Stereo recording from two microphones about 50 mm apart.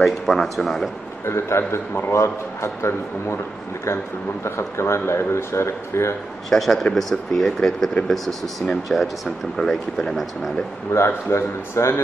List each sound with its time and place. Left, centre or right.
0.0 s speech: centre
1.2 s speech: left
4.5 s speech: left
6.5 s speech: centre
8.9 s speech: centre
11.1 s speech: left